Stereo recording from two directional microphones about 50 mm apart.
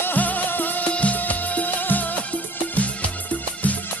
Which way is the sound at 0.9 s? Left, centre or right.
Left.